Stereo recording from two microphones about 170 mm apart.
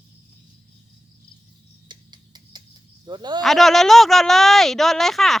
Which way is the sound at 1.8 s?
25° right (ahead or behind).